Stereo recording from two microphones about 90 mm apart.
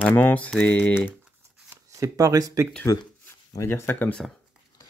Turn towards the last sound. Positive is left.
turn(degrees=20)  # may be behind; listen again after turning